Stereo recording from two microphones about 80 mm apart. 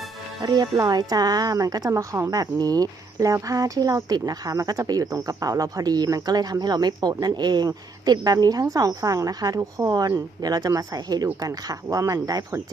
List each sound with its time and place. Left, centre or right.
0.4 s speech: right
1.9 s a woman's voice: right